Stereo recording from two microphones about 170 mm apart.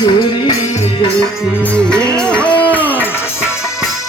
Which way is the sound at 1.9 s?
5° left (ahead or behind).